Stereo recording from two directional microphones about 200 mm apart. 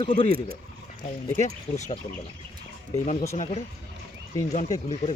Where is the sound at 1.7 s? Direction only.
10° left (ahead or behind).